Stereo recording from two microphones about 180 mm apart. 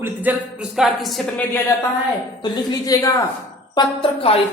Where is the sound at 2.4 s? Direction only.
20° left (ahead or behind).